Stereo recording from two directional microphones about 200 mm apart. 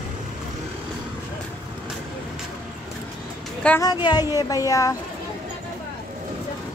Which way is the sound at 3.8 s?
20° left (ahead or behind).